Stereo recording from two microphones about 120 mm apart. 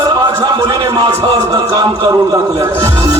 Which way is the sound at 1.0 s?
35° right (ahead or behind).